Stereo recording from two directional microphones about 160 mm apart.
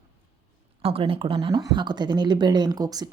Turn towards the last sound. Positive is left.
turn(degrees=-25)  # may be behind; listen again after turning